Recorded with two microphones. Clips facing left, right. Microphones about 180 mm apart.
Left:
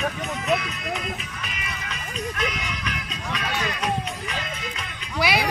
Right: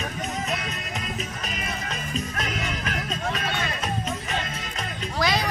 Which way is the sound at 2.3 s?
40° right (ahead or behind).